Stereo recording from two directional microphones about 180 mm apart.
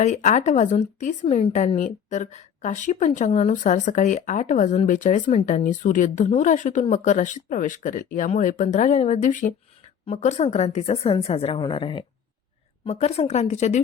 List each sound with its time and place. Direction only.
0.0 s a woman's voice: 40° left (ahead or behind)